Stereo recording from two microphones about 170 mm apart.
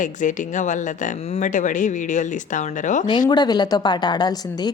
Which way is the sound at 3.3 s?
25° left (ahead or behind).